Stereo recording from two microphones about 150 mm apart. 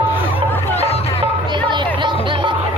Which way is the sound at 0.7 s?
45° left (ahead or behind).